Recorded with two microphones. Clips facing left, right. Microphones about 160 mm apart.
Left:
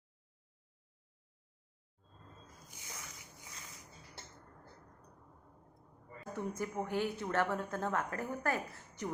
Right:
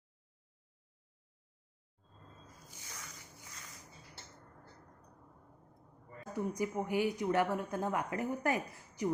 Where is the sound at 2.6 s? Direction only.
15° left (ahead or behind).